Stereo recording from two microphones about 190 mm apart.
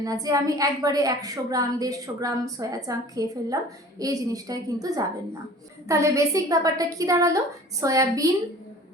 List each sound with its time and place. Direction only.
0.0 s a woman's voice: 20° right (ahead or behind)